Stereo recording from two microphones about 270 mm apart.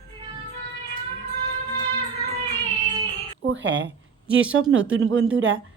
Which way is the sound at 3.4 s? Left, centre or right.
Right.